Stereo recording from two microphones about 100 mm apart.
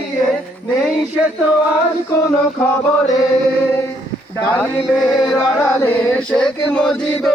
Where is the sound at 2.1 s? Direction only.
30° left (ahead or behind).